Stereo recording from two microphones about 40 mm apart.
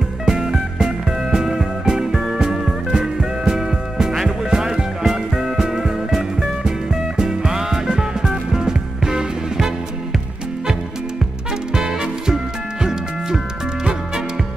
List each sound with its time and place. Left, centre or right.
0.2 s music: centre
11.7 s swing music: centre